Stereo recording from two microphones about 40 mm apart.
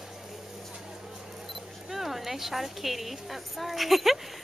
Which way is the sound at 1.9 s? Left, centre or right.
Centre.